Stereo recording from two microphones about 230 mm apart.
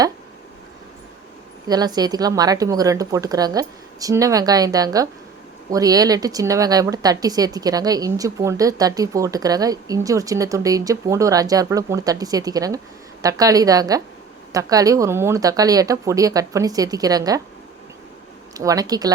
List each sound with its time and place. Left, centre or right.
1.6 s speech: centre
18.5 s speech: centre